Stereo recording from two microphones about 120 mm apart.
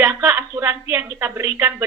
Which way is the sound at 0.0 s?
20° right (ahead or behind).